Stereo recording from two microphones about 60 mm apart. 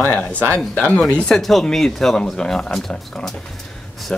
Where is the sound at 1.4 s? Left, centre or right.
Centre.